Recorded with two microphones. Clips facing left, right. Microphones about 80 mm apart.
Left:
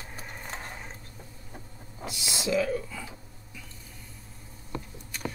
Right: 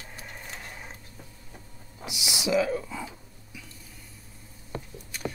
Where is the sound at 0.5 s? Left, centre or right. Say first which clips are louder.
Left 5 dB; left.